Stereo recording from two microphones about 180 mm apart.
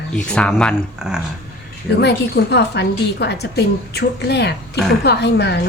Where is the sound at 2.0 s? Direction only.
70° left (ahead or behind).